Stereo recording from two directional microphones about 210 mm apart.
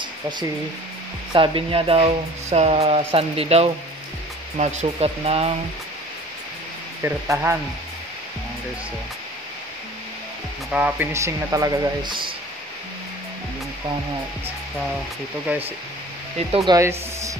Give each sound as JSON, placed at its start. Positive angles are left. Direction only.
{"t": 1.3, "sound": "speech", "side_deg": -25}
{"t": 7.0, "sound": "speech", "side_deg": -10}
{"t": 10.7, "sound": "speech", "side_deg": -5}
{"t": 16.3, "sound": "speech", "side_deg": -25}
{"t": 16.7, "sound": "speech", "side_deg": -15}